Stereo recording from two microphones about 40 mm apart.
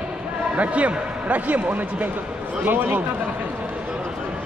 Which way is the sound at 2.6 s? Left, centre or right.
Right.